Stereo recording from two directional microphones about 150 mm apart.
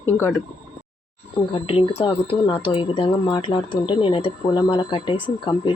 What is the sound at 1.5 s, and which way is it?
Speech, 35° left (ahead or behind).